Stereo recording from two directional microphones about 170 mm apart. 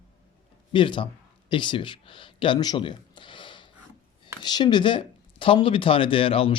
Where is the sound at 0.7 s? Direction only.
30° left (ahead or behind).